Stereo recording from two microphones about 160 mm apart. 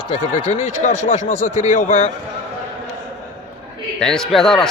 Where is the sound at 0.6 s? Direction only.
55° left (ahead or behind).